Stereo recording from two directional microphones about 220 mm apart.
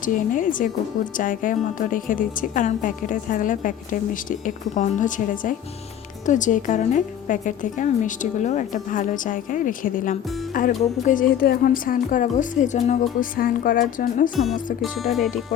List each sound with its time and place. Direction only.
0.0 s a woman's voice: 35° left (ahead or behind)
14.3 s speech: centre (ahead or behind)